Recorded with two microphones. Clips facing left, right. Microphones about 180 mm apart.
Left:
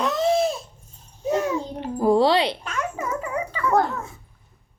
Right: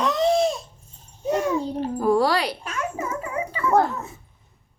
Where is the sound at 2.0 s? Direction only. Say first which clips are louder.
Left 3 dB; 25° left (ahead or behind).